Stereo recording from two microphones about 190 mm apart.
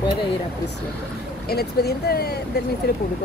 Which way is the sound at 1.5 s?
55° left (ahead or behind).